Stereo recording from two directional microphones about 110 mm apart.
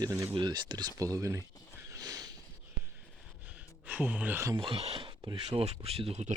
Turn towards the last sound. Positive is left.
turn(degrees=-75)  # may be behind; listen again after turning